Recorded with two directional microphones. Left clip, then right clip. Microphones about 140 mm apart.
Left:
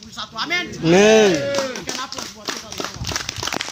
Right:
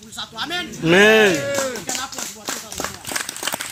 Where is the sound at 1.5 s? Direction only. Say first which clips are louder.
Even; 65° right (ahead or behind).